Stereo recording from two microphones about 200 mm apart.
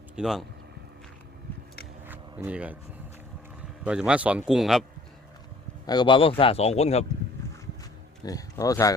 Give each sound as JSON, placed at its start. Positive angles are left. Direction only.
{"t": 0.2, "sound": "a man's voice", "side_deg": 0}
{"t": 2.0, "sound": "a sound", "side_deg": -10}
{"t": 3.8, "sound": "a man's voice", "side_deg": -5}
{"t": 5.8, "sound": "a man's voice", "side_deg": 20}
{"t": 8.2, "sound": "speech", "side_deg": 20}